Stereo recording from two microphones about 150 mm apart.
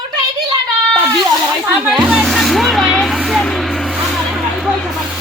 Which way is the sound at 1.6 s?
5° right (ahead or behind).